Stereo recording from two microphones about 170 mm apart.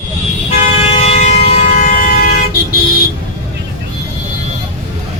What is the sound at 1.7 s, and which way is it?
Civil defense siren, 50° left (ahead or behind).